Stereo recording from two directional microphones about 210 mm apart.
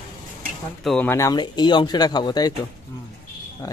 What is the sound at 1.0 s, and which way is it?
Speech, 15° left (ahead or behind).